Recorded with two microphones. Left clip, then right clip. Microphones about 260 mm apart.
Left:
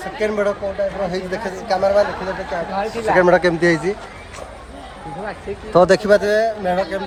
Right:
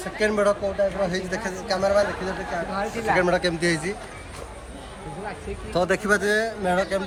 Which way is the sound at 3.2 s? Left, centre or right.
Left.